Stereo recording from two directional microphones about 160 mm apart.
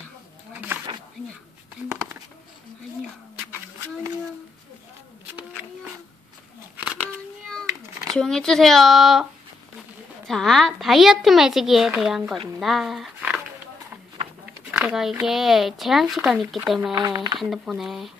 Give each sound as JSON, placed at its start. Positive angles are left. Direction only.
{"t": 7.0, "sound": "a sound", "side_deg": 5}
{"t": 10.2, "sound": "speech", "side_deg": 0}
{"t": 14.7, "sound": "speech", "side_deg": -5}
{"t": 16.9, "sound": "speech", "side_deg": -20}
{"t": 17.4, "sound": "speech", "side_deg": 0}